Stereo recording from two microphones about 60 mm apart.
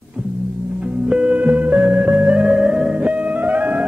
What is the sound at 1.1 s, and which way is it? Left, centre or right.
Music, right.